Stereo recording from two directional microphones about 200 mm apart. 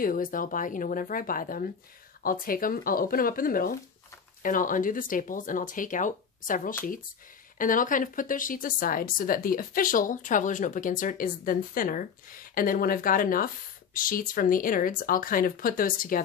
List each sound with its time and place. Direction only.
0.0 s speech: 45° left (ahead or behind)